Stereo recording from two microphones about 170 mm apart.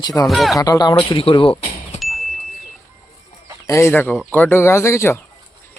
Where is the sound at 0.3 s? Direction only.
Centre (ahead or behind).